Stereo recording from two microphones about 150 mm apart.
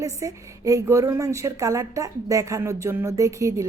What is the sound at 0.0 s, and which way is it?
A woman's voice, 20° right (ahead or behind).